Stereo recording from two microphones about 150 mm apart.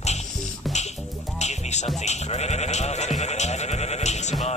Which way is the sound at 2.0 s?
50° left (ahead or behind).